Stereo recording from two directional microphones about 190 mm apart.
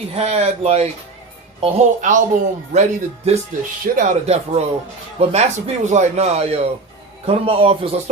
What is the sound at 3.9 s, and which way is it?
Speech, 35° right (ahead or behind).